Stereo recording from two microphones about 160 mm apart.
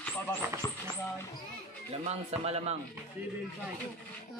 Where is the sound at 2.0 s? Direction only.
40° right (ahead or behind).